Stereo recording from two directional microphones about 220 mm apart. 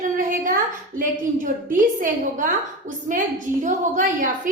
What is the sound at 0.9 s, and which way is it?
A woman's voice, 35° right (ahead or behind).